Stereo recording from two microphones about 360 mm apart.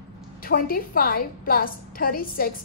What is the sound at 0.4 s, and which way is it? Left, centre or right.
A woman's voice, left.